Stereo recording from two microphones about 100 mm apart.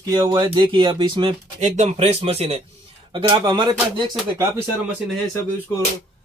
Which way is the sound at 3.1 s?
45° right (ahead or behind).